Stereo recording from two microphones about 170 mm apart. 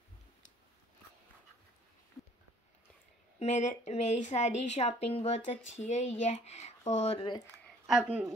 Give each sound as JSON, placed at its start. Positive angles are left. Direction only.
{"t": 2.2, "sound": "a sound", "side_deg": 20}
{"t": 3.3, "sound": "a woman's voice", "side_deg": 45}
{"t": 7.8, "sound": "speech", "side_deg": -5}